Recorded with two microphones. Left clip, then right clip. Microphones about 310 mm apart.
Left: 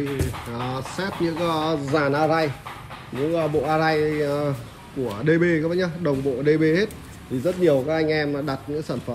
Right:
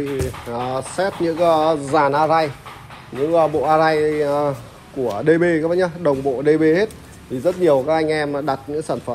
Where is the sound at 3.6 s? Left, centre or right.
Centre.